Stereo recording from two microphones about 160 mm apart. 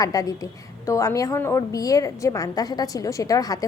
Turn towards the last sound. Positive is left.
turn(degrees=20)  # may be behind; listen again after turning